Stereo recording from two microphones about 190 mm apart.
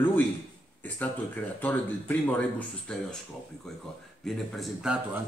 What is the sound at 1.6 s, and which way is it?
Speech, 10° left (ahead or behind).